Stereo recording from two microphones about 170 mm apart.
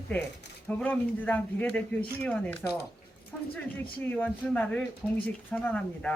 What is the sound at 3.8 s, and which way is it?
Speech, 10° left (ahead or behind).